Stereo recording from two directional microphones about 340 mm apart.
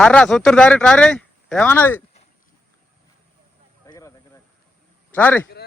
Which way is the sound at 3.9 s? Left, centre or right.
Centre.